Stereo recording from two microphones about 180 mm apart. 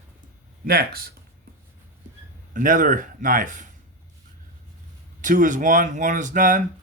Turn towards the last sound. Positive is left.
turn(degrees=-45)  # may be behind; listen again after turning